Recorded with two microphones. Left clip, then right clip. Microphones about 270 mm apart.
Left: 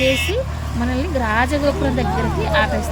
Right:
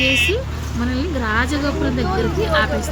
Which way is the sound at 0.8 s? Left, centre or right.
Centre.